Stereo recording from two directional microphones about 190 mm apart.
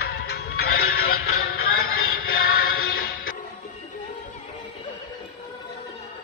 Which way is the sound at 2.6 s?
55° left (ahead or behind).